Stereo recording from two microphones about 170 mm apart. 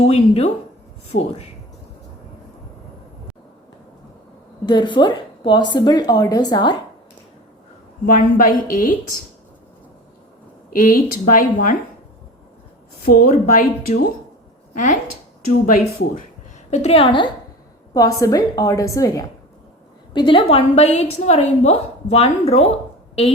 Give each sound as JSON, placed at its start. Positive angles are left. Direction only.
{"t": 0.1, "sound": "a woman's voice", "side_deg": 40}
{"t": 1.1, "sound": "speech", "side_deg": 90}
{"t": 4.6, "sound": "a woman's voice", "side_deg": 25}
{"t": 8.0, "sound": "a woman's voice", "side_deg": 55}
{"t": 10.7, "sound": "speech", "side_deg": 55}
{"t": 13.1, "sound": "a woman's voice", "side_deg": 55}
{"t": 15.6, "sound": "speech", "side_deg": 55}
{"t": 16.7, "sound": "a woman's voice", "side_deg": 35}
{"t": 20.1, "sound": "a woman's voice", "side_deg": 30}